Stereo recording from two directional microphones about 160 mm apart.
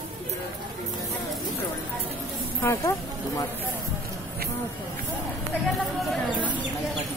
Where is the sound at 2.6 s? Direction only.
15° left (ahead or behind).